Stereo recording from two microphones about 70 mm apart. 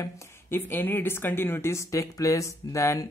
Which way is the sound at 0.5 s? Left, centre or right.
Left.